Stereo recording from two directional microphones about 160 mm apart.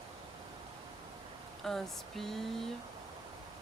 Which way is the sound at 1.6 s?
Centre (ahead or behind).